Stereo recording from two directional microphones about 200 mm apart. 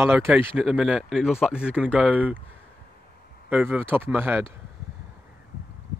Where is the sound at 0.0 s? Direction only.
10° right (ahead or behind).